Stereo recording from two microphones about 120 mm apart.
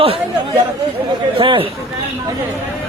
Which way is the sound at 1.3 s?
45° right (ahead or behind).